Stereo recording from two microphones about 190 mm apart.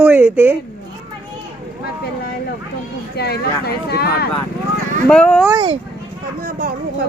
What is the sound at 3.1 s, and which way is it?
Speech, 55° left (ahead or behind).